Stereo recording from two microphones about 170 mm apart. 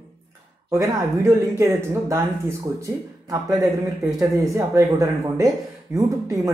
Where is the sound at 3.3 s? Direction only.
20° right (ahead or behind).